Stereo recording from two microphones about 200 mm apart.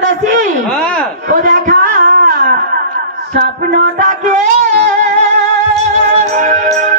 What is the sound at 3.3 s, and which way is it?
Music, 50° right (ahead or behind).